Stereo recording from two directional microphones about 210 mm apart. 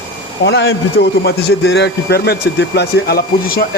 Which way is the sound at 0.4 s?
55° left (ahead or behind).